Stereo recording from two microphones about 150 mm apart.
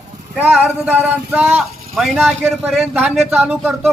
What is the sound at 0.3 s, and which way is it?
A man's voice, 10° right (ahead or behind).